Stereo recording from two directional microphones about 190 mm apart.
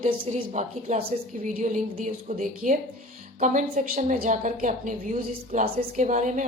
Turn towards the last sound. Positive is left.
turn(degrees=-40)  # may be behind; listen again after turning